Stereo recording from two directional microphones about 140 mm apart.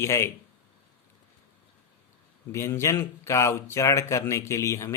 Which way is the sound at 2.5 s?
20° left (ahead or behind).